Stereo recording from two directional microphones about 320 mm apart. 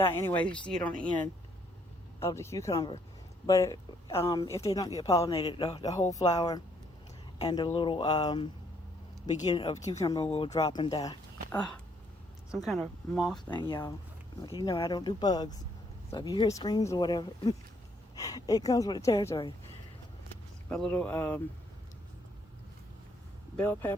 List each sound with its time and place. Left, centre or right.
0.0 s speech: centre
2.1 s speech: centre
13.6 s speech: centre
20.7 s speech: centre
23.6 s speech: centre